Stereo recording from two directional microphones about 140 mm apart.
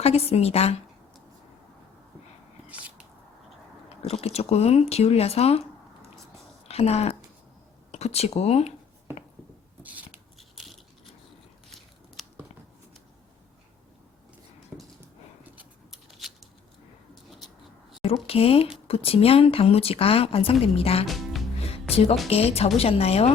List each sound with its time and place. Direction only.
0.0 s speech: 45° left (ahead or behind)
2.6 s a sound: 10° right (ahead or behind)
4.1 s speech: 45° left (ahead or behind)
6.7 s speech: 45° left (ahead or behind)
10.3 s a sound: centre (ahead or behind)
15.5 s scissors: centre (ahead or behind)
18.0 s speech: 45° left (ahead or behind)
21.1 s music: centre (ahead or behind)
21.7 s music: 45° left (ahead or behind)
22.3 s speech: 45° left (ahead or behind)